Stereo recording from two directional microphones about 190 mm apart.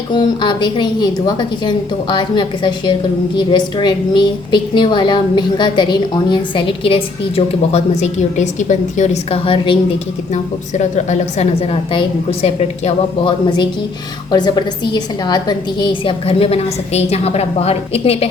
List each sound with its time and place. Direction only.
0.1 s a woman's voice: 25° left (ahead or behind)